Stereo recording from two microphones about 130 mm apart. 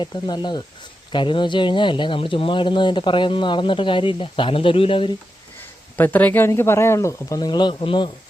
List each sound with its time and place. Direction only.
0.0 s speech: 35° left (ahead or behind)
6.0 s speech: 15° left (ahead or behind); by 8.1 s 40° left (ahead or behind)